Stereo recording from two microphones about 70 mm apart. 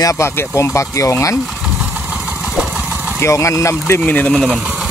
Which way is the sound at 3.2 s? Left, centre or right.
Left.